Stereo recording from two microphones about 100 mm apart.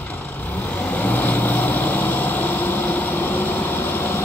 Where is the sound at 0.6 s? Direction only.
15° left (ahead or behind).